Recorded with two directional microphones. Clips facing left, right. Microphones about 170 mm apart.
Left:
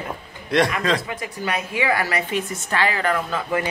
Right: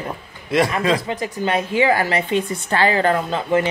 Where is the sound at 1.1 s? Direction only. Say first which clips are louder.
Right 5 dB; 30° right (ahead or behind).